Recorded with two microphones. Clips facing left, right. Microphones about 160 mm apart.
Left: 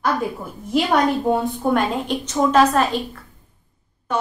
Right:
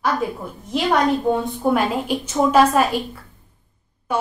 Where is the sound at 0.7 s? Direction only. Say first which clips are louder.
Even; 5° left (ahead or behind).